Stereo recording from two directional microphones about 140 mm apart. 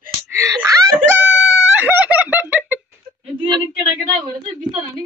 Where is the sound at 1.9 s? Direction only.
10° right (ahead or behind).